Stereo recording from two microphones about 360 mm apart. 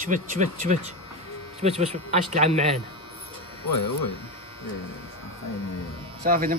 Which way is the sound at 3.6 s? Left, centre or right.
Left.